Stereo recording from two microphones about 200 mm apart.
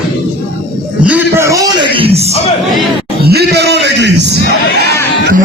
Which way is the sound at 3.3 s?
55° right (ahead or behind).